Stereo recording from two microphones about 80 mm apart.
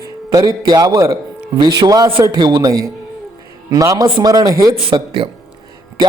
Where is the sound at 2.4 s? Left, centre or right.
Right.